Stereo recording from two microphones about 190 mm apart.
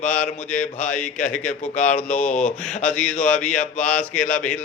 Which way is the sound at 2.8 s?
5° left (ahead or behind).